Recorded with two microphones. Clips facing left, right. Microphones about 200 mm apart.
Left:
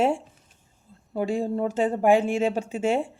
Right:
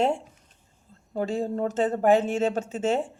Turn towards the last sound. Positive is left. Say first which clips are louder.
# left 1 dB
turn(degrees=10)  # may be behind; listen again after turning